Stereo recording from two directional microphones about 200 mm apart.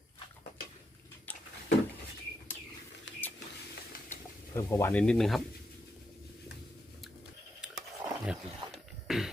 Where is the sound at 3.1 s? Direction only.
65° left (ahead or behind).